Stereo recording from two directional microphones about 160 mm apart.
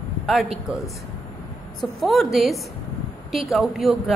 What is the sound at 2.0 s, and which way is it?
A woman's voice, centre (ahead or behind).